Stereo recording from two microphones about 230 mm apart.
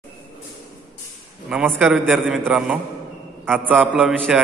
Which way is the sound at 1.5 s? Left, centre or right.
Centre.